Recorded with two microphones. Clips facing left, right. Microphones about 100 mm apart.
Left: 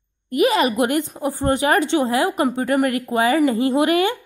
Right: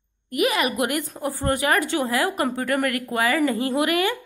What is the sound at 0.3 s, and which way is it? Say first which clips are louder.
A woman's voice: left 5 dB; 30° left (ahead or behind).